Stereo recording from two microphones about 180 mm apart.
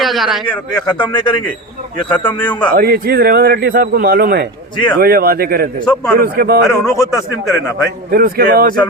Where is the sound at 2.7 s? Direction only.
60° right (ahead or behind).